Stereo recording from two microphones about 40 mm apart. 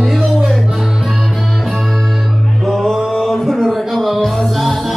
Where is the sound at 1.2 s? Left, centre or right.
Centre.